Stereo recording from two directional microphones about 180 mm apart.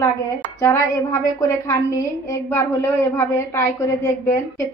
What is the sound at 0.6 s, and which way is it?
A woman's voice, 15° left (ahead or behind).